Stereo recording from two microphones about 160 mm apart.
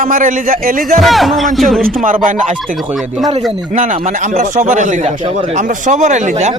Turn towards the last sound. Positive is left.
turn(degrees=-45)  # may be behind; listen again after turning